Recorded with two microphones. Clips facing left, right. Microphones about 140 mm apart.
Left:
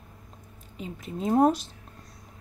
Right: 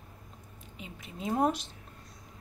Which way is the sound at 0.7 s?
40° left (ahead or behind).